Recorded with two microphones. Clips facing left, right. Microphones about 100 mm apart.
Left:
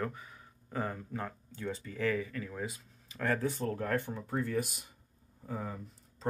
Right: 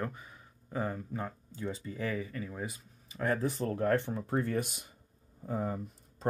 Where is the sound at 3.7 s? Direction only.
35° right (ahead or behind).